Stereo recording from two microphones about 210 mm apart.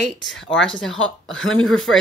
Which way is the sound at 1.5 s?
75° left (ahead or behind).